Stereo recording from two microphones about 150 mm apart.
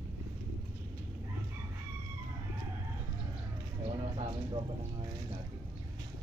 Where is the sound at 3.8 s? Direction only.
35° right (ahead or behind).